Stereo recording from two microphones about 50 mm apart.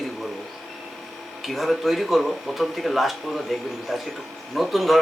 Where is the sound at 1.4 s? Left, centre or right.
Centre.